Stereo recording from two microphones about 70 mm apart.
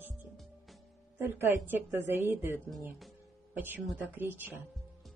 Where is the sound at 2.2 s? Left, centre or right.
Right.